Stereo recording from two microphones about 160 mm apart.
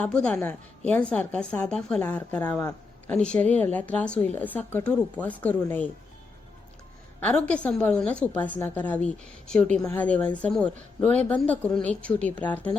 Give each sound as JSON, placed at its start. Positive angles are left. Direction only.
{"t": 0.0, "sound": "a woman's voice", "side_deg": 5}
{"t": 2.6, "sound": "a man's voice", "side_deg": 20}
{"t": 3.2, "sound": "a woman's voice", "side_deg": 5}
{"t": 7.2, "sound": "a woman's voice", "side_deg": 10}